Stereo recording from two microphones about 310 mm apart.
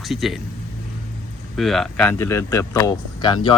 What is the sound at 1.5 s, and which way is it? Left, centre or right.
Speech, centre.